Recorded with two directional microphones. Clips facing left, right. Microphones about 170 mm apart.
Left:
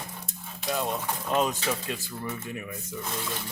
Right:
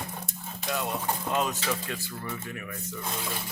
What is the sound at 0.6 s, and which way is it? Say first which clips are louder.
Speech: left 1 dB; 20° left (ahead or behind).